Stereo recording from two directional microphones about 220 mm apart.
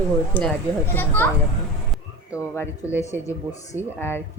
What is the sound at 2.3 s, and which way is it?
Speech, 10° left (ahead or behind).